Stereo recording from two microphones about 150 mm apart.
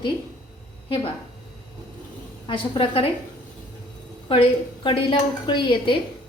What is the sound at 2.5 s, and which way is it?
Speech, 35° left (ahead or behind).